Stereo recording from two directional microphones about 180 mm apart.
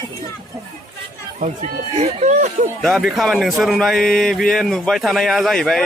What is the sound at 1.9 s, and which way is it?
Speech, 35° right (ahead or behind).